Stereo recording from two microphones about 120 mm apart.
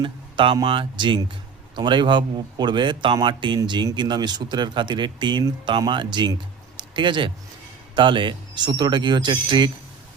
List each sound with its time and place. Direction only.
0.0 s a man's voice: 45° right (ahead or behind)
6.7 s a sound: 40° right (ahead or behind)
7.9 s a man's voice: 45° right (ahead or behind)